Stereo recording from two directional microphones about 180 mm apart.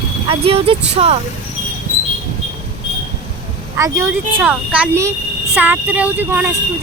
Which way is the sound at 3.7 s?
15° right (ahead or behind).